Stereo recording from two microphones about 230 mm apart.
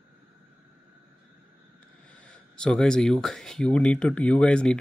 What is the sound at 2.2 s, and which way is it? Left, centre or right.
Speech, centre.